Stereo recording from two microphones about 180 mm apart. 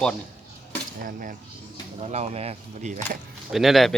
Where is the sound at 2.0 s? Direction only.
40° right (ahead or behind).